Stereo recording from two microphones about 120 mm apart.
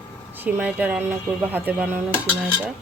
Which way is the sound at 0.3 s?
15° right (ahead or behind).